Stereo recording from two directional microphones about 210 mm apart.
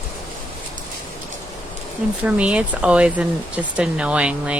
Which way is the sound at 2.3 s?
5° right (ahead or behind).